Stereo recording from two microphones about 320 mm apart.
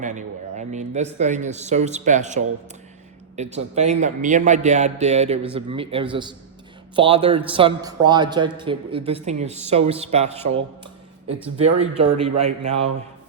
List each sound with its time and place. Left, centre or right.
0.0 s a man's voice: right